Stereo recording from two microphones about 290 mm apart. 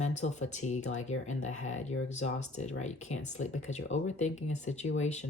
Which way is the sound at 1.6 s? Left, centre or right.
Left.